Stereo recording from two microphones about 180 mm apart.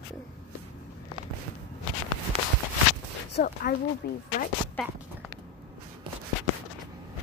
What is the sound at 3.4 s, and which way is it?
Speech, 55° left (ahead or behind).